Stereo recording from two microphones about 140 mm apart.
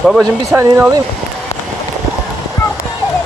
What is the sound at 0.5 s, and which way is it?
Speech, 20° right (ahead or behind).